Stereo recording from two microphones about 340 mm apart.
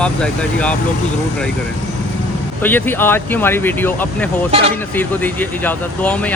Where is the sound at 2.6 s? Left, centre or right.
Centre.